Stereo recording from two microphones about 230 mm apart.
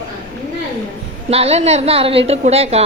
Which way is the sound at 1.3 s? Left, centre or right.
Right.